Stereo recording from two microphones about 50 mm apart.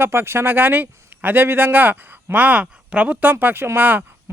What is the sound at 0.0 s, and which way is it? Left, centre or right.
A man's voice, right.